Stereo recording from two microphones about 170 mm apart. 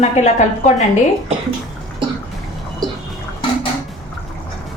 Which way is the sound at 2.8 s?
25° right (ahead or behind).